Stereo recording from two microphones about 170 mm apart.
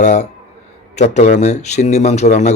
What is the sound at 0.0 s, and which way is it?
A man's voice, 45° left (ahead or behind).